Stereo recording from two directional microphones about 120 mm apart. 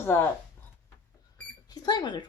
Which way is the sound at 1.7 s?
35° left (ahead or behind).